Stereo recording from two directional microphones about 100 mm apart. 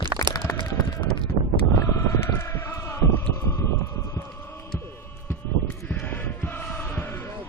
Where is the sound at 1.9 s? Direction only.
30° left (ahead or behind).